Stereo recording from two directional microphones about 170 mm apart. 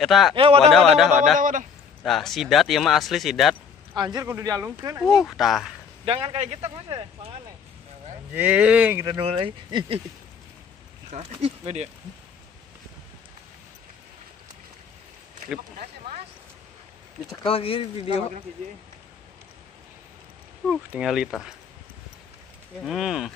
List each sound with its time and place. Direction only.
0.0 s speech: centre (ahead or behind)
0.4 s speech: 35° right (ahead or behind)
0.7 s speech: centre (ahead or behind)
1.4 s a man's voice: 50° right (ahead or behind)
2.0 s speech: centre (ahead or behind)
3.9 s speech: 25° right (ahead or behind)
5.0 s speech: centre (ahead or behind)
6.0 s speech: 35° right (ahead or behind)
8.4 s speech: 10° right (ahead or behind)
9.1 s speech: 35° right (ahead or behind)
11.1 s speech: 40° right (ahead or behind)
17.4 s speech: 35° left (ahead or behind)
20.6 s speech: 5° right (ahead or behind)
22.8 s speech: centre (ahead or behind)